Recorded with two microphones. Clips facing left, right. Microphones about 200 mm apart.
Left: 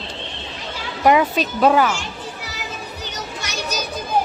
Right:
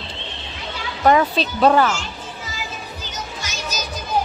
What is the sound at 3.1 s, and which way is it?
Music, 70° left (ahead or behind).